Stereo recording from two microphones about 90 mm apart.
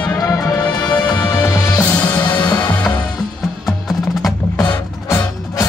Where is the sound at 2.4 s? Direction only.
50° left (ahead or behind).